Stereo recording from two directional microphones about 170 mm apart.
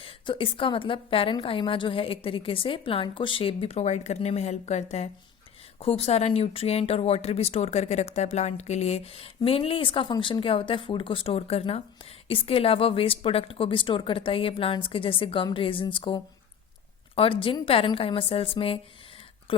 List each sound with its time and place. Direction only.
0.0 s speech: 30° left (ahead or behind)